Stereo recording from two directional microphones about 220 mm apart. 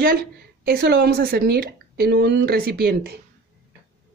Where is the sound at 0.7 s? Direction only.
45° right (ahead or behind).